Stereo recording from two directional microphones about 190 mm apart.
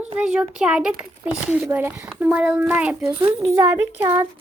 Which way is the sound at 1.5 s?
10° right (ahead or behind).